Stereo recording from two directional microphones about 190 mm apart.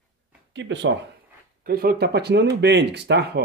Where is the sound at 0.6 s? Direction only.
70° right (ahead or behind).